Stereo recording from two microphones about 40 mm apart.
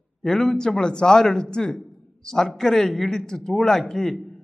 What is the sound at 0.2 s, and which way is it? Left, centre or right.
A man's voice, centre.